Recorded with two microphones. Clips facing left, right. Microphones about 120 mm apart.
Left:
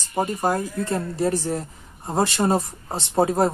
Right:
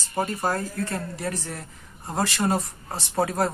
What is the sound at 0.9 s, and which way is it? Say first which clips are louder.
Speech: left 7 dB; 25° left (ahead or behind).